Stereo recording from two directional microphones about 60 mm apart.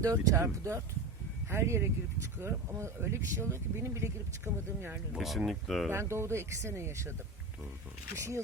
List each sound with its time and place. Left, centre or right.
0.0 s speech: right
0.3 s speech: right
5.1 s speech: centre
5.9 s speech: right
8.1 s speech: right